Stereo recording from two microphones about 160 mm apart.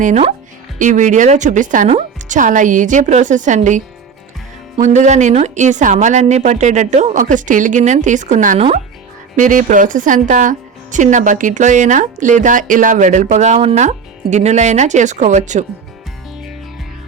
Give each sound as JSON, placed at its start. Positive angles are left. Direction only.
{"t": 0.0, "sound": "speech", "side_deg": -45}